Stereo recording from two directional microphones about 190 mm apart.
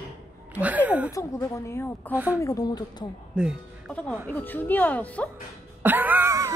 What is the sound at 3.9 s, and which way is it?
A woman's voice, 10° left (ahead or behind).